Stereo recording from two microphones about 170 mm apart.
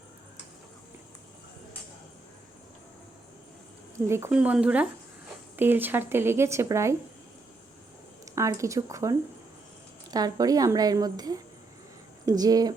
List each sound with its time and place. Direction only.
3.9 s a woman's voice: 15° right (ahead or behind)
8.2 s a woman's voice: 20° right (ahead or behind)